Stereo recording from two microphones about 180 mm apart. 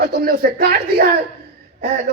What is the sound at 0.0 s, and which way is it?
Speech, 55° right (ahead or behind).